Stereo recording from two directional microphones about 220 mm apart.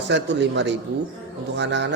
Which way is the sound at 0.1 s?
55° right (ahead or behind).